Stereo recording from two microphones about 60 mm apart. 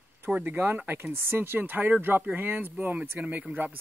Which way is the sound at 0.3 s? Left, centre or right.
Right.